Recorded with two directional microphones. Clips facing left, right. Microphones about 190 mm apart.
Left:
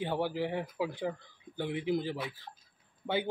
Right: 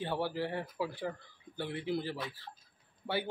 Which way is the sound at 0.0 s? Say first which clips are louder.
Left 2 dB; 15° left (ahead or behind).